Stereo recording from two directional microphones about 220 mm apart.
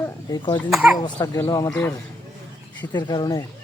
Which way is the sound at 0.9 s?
20° left (ahead or behind).